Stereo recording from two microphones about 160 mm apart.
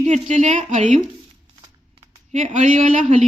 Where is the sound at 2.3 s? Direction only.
50° right (ahead or behind).